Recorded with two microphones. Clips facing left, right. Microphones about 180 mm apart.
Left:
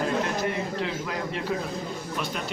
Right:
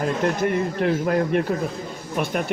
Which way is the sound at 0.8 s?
55° right (ahead or behind).